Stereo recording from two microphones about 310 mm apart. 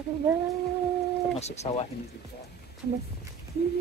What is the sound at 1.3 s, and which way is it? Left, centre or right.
Speech, left.